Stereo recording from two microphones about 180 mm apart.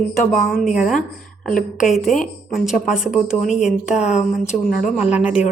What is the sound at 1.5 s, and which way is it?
Speech, 50° left (ahead or behind).